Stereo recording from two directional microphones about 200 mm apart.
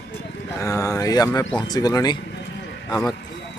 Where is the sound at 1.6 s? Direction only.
20° left (ahead or behind).